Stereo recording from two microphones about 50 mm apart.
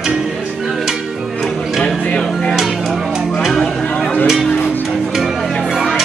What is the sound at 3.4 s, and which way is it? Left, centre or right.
Music, centre.